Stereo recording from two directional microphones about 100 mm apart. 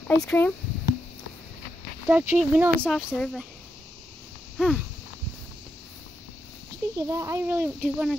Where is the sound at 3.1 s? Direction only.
Centre (ahead or behind).